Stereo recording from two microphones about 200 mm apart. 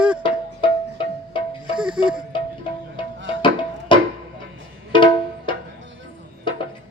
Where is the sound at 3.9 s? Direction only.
25° left (ahead or behind).